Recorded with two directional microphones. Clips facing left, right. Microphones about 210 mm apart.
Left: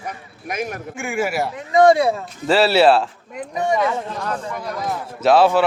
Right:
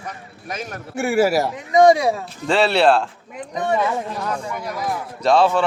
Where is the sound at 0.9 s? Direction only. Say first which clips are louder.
Right 6 dB; 40° right (ahead or behind).